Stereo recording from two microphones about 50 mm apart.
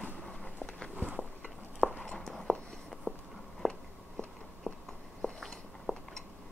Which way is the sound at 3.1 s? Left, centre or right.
Left.